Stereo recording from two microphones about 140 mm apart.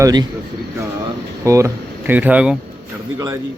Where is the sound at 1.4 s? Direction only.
20° right (ahead or behind).